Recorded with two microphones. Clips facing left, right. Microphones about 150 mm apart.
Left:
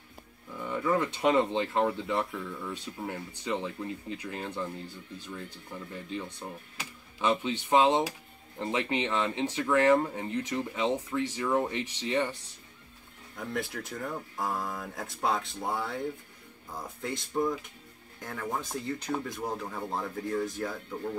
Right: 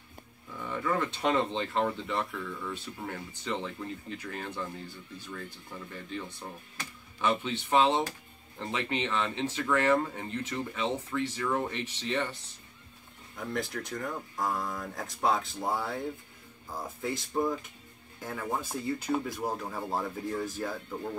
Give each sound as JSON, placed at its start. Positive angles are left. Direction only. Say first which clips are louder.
{"t": 0.7, "sound": "speech", "louder": "left 2 dB", "side_deg": 15}
{"t": 6.8, "sound": "speech", "louder": "even", "side_deg": 15}
{"t": 13.4, "sound": "speech", "louder": "even", "side_deg": 0}
{"t": 17.0, "sound": "speech", "louder": "even", "side_deg": 0}